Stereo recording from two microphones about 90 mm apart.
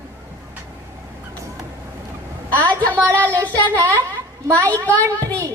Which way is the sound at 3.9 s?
30° right (ahead or behind).